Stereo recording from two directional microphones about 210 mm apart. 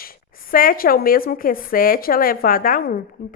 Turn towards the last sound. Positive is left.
turn(degrees=40)  # may be behind; listen again after turning